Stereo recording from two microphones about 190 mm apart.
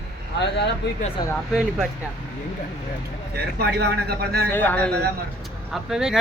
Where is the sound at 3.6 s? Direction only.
55° right (ahead or behind).